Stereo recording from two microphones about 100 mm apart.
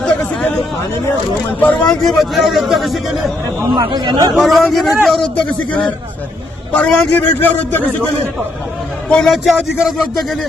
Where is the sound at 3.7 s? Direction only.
45° right (ahead or behind).